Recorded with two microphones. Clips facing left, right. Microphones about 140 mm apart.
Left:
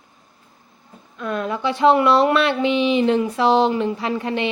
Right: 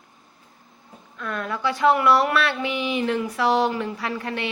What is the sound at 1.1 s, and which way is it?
Speech, 20° left (ahead or behind).